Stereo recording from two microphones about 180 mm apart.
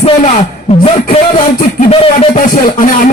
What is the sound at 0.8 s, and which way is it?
Speech, 30° left (ahead or behind).